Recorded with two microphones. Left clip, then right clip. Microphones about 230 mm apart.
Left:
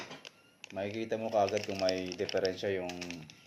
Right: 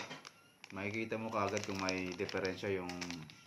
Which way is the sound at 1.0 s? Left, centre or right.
Centre.